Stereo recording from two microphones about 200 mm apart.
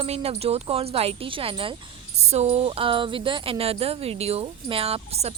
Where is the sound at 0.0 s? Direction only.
30° right (ahead or behind).